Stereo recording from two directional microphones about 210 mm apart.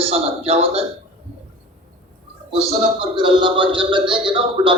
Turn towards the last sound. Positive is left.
turn(degrees=-25)  # may be behind; listen again after turning